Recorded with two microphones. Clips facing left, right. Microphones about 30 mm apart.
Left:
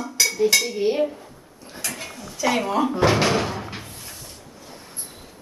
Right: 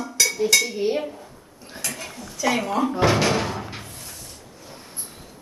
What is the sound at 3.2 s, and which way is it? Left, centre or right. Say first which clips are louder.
Door: left 1 dB; centre.